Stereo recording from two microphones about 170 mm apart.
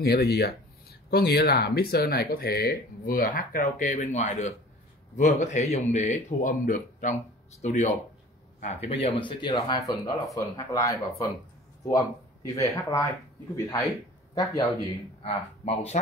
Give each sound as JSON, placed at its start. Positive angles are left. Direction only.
{"t": 0.0, "sound": "a man's voice", "side_deg": 65}
{"t": 15.2, "sound": "speech", "side_deg": 35}